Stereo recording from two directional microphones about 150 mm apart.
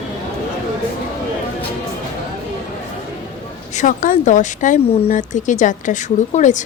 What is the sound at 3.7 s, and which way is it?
A woman's voice, 55° left (ahead or behind).